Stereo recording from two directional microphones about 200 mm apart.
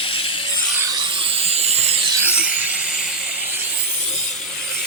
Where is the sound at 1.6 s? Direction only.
30° right (ahead or behind).